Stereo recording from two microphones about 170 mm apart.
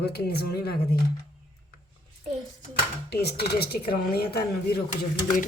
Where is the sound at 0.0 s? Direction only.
70° left (ahead or behind).